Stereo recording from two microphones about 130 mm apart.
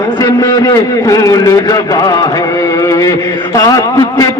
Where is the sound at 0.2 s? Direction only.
25° left (ahead or behind).